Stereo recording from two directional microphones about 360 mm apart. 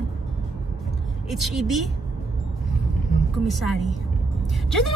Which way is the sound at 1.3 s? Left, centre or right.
Centre.